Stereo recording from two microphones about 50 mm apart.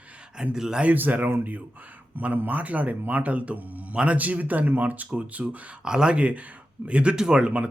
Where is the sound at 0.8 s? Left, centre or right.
Right.